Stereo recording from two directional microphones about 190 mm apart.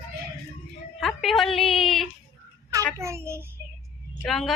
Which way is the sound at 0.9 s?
Centre (ahead or behind).